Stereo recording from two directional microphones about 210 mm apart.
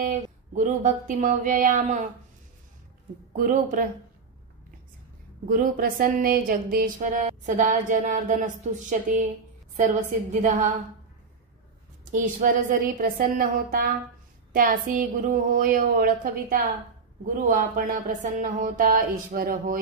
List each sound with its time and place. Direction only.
0.6 s speech: 35° right (ahead or behind)
3.3 s speech: 40° right (ahead or behind)
5.5 s speech: 40° right (ahead or behind)
12.1 s speech: 40° right (ahead or behind)